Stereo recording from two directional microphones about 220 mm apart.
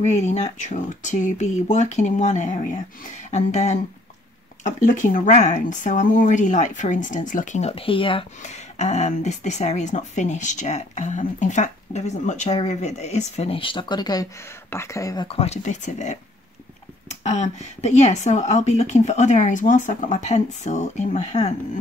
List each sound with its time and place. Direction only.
0.1 s speech: 30° left (ahead or behind)